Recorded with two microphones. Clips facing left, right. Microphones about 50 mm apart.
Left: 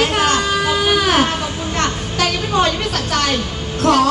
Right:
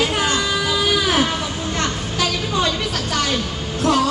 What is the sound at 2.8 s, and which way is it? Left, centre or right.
A woman's voice, left.